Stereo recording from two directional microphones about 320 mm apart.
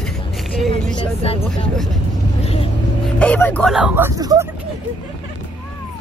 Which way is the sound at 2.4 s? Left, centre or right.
Centre.